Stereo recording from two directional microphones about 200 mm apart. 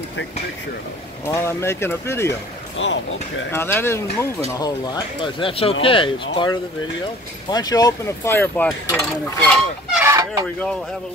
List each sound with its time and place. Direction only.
1.2 s speech: 15° left (ahead or behind)
2.8 s speech: 70° left (ahead or behind)
3.5 s speech: 10° left (ahead or behind)
9.9 s chicken: 15° right (ahead or behind)